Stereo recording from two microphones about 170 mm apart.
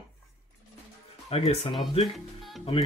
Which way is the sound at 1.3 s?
35° left (ahead or behind).